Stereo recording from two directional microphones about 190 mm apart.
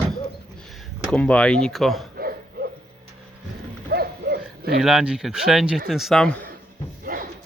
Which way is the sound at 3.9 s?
55° right (ahead or behind).